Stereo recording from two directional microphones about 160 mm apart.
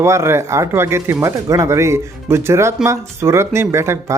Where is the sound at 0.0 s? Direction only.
15° right (ahead or behind).